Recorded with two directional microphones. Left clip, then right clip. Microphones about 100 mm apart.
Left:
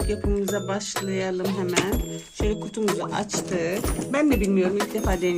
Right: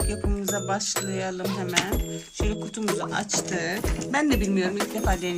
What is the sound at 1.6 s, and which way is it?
Speech, centre (ahead or behind).